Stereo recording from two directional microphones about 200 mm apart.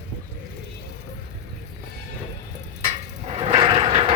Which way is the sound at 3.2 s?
30° right (ahead or behind).